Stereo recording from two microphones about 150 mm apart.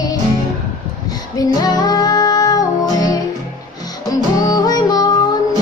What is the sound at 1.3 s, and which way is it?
Music, 25° left (ahead or behind).